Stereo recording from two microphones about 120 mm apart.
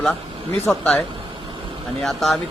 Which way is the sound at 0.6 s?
Centre (ahead or behind).